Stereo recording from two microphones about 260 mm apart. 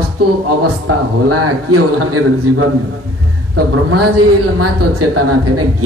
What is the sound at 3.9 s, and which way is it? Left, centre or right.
Speech, right.